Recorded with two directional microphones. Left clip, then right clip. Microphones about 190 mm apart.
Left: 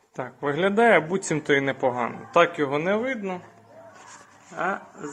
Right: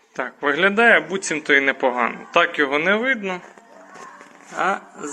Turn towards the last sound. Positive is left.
turn(degrees=0)  # may be behind; listen again after turning